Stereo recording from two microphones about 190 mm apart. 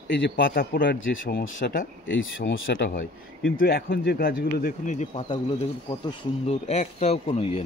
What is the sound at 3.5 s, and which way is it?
Speech, 55° left (ahead or behind).